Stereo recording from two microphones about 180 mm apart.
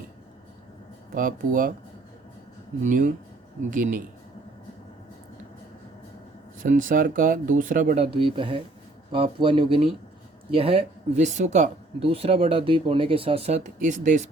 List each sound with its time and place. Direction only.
1.1 s speech: 50° right (ahead or behind)
2.8 s speech: 45° right (ahead or behind)
6.6 s speech: 50° right (ahead or behind)
8.1 s speech: 30° right (ahead or behind)